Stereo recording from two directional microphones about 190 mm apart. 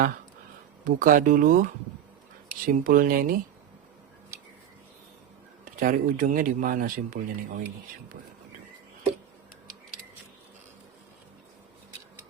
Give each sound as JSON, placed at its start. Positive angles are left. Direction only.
{"t": 0.9, "sound": "speech", "side_deg": -45}
{"t": 2.6, "sound": "speech", "side_deg": -45}
{"t": 5.6, "sound": "speech", "side_deg": -45}